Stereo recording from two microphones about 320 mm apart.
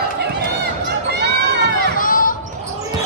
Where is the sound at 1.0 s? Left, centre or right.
Right.